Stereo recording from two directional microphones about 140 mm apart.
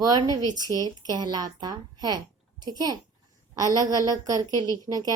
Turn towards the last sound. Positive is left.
turn(degrees=-25)  # may be behind; listen again after turning